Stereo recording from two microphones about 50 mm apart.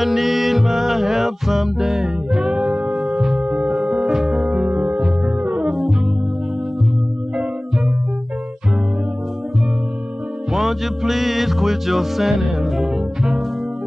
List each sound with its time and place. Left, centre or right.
0.0 s music: centre
4.6 s music: right
5.7 s music: centre
10.5 s music: centre